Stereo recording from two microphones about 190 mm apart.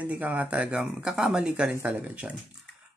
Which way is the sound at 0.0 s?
10° right (ahead or behind).